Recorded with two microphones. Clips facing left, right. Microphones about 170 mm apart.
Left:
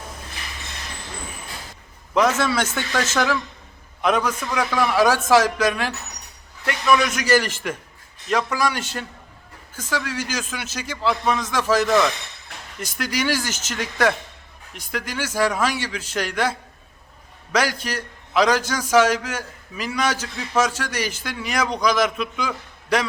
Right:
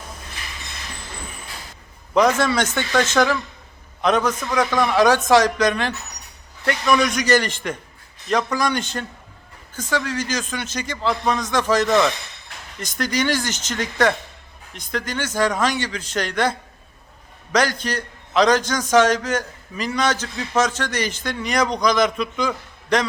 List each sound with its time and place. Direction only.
2.1 s a man's voice: 5° left (ahead or behind)